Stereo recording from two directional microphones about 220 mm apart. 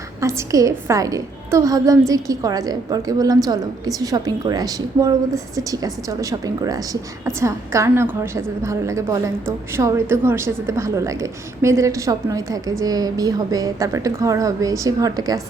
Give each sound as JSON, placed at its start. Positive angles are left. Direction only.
{"t": 0.2, "sound": "a woman's voice", "side_deg": -15}